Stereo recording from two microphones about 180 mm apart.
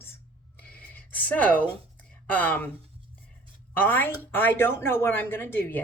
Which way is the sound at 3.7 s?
10° left (ahead or behind).